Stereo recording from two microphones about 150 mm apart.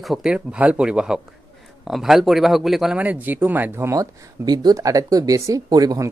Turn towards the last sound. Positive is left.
turn(degrees=-25)  # may be behind; listen again after turning